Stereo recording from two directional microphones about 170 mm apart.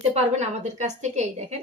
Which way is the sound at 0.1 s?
40° right (ahead or behind).